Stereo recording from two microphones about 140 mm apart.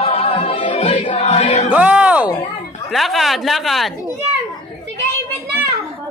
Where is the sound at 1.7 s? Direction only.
10° right (ahead or behind).